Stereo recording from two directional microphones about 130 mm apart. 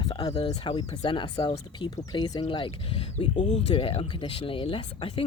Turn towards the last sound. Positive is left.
turn(degrees=40)  # may be behind; listen again after turning